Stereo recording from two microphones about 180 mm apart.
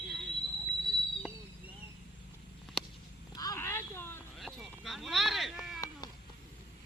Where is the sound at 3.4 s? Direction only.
20° left (ahead or behind).